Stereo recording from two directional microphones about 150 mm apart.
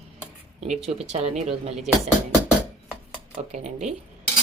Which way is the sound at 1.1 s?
45° right (ahead or behind).